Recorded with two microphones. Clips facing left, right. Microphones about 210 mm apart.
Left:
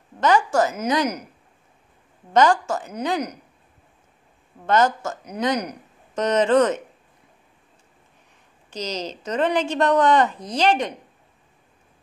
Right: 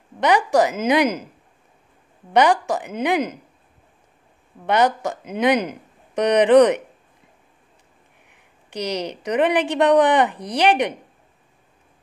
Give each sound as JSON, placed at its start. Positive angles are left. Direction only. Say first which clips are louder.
{"t": 0.2, "sound": "speech", "louder": "right 2 dB", "side_deg": -15}
{"t": 2.3, "sound": "speech", "louder": "right 1 dB", "side_deg": -15}
{"t": 4.6, "sound": "speech", "louder": "right 1 dB", "side_deg": -15}
{"t": 8.7, "sound": "a woman's voice", "louder": "right 4 dB", "side_deg": -65}
{"t": 9.1, "sound": "speech", "louder": "right 3 dB", "side_deg": -15}